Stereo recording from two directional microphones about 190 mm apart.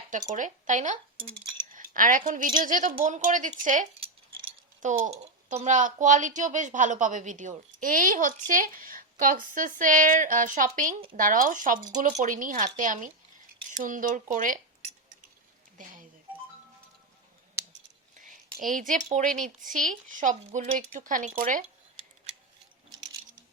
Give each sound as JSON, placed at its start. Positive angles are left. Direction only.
{"t": 0.1, "sound": "speech", "side_deg": -40}
{"t": 15.8, "sound": "speech", "side_deg": -45}
{"t": 18.2, "sound": "a sound", "side_deg": -45}
{"t": 19.0, "sound": "speech", "side_deg": -40}